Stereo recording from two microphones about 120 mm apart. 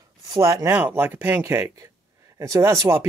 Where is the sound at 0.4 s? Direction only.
25° right (ahead or behind).